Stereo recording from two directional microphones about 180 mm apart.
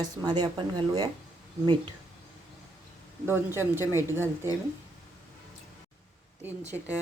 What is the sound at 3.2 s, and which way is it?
Speech, 15° right (ahead or behind).